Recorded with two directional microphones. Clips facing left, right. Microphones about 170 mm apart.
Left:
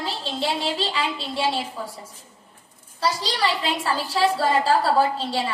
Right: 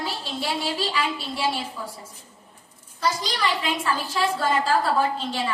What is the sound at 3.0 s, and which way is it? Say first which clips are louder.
A woman's voice: left 2 dB; 30° left (ahead or behind).